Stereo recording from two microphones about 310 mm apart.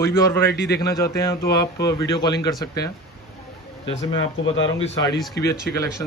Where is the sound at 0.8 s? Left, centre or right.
Centre.